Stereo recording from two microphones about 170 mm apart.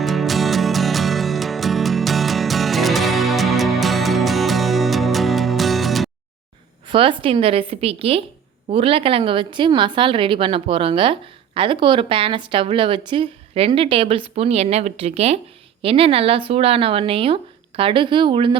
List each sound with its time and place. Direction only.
0.0 s music: centre (ahead or behind)
6.8 s a woman's voice: 30° right (ahead or behind)